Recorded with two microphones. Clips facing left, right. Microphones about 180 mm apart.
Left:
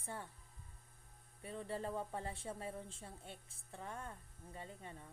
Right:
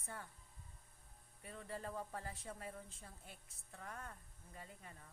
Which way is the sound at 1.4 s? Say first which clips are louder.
Left 5 dB; 25° left (ahead or behind).